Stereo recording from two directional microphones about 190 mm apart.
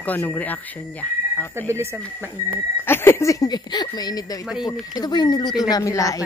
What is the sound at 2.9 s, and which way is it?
Speech, 10° left (ahead or behind).